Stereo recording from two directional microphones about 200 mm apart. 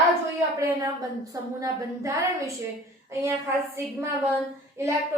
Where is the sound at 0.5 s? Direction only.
15° right (ahead or behind).